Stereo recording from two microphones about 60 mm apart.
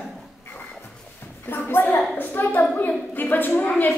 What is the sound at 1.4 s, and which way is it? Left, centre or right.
A woman's voice, left.